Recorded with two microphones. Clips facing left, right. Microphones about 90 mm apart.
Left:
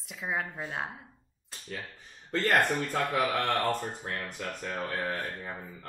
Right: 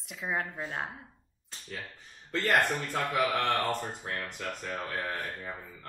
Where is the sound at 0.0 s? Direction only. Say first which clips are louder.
Even; centre (ahead or behind).